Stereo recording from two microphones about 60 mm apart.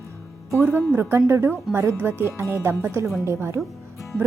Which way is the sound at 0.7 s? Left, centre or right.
Right.